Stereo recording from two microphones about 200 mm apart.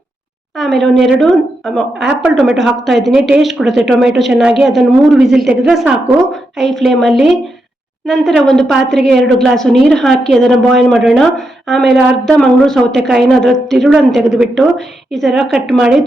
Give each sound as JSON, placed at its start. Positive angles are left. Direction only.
{"t": 0.5, "sound": "a woman's voice", "side_deg": 0}